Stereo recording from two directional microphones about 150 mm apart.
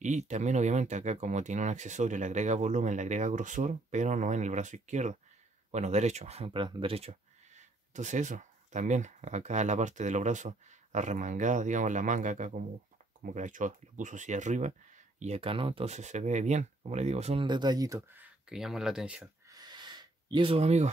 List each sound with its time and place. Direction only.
0.0 s speech: 50° right (ahead or behind)
17.5 s speech: 30° right (ahead or behind)
18.2 s speech: 5° right (ahead or behind)
19.5 s a sound: 30° right (ahead or behind); by 20.9 s 45° right (ahead or behind)